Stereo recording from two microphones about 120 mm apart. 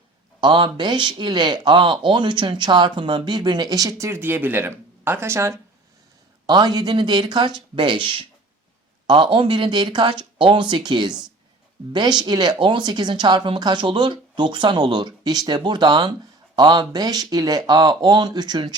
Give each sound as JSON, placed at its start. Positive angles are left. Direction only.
{"t": 0.4, "sound": "speech", "side_deg": -40}
{"t": 6.4, "sound": "speech", "side_deg": -35}